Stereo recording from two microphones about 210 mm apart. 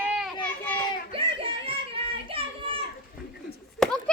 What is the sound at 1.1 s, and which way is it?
Children playing, 25° right (ahead or behind).